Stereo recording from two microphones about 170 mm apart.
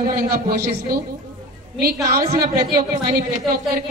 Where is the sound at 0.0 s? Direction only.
60° right (ahead or behind).